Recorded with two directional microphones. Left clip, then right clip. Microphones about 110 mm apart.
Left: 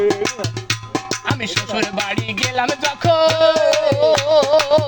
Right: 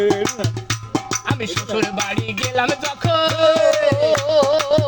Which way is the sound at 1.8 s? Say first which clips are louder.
Right 3 dB; 35° right (ahead or behind).